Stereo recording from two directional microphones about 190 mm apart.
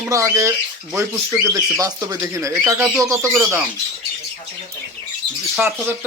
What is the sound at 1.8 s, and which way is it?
Speech, 15° right (ahead or behind).